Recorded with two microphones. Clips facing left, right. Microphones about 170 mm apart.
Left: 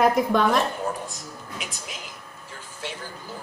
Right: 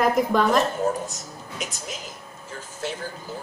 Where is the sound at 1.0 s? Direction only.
45° right (ahead or behind).